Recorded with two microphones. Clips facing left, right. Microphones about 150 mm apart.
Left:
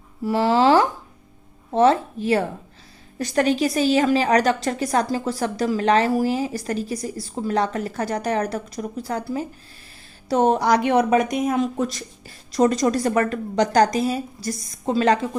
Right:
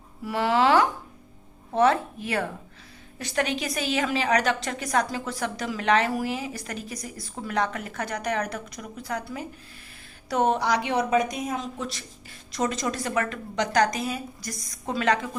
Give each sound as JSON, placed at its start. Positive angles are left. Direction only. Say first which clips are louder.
{"t": 0.3, "sound": "a woman's voice", "louder": "left 5 dB", "side_deg": 30}
{"t": 12.5, "sound": "a woman's voice", "louder": "left 9 dB", "side_deg": 40}